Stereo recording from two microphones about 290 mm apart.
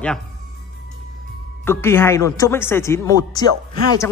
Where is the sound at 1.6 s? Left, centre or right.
Centre.